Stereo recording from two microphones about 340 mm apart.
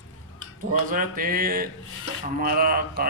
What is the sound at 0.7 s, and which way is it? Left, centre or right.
A man's voice, right.